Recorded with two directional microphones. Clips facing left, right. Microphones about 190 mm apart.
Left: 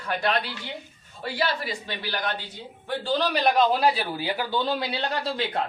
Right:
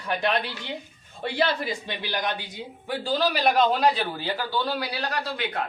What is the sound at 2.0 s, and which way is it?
A man's voice, 15° right (ahead or behind).